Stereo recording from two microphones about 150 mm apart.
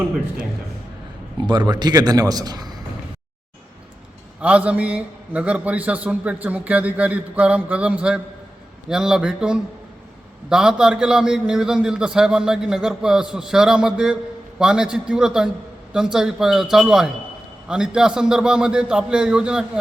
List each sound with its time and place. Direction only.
1.5 s a man's voice: 30° right (ahead or behind)
4.4 s a man's voice: 10° right (ahead or behind)